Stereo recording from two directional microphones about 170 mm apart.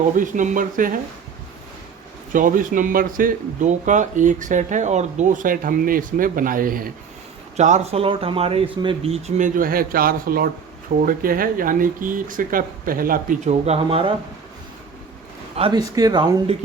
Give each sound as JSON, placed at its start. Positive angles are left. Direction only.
{"t": 0.2, "sound": "speech", "side_deg": -50}
{"t": 2.3, "sound": "speech", "side_deg": -50}
{"t": 7.5, "sound": "speech", "side_deg": -40}
{"t": 9.6, "sound": "speech", "side_deg": -60}
{"t": 15.6, "sound": "speech", "side_deg": -35}
{"t": 16.0, "sound": "speech", "side_deg": -20}